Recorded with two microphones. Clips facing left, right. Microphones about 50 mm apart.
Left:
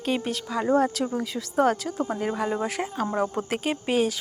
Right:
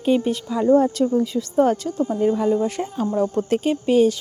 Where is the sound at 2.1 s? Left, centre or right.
Centre.